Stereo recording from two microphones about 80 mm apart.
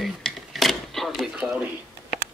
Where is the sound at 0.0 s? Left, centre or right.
Centre.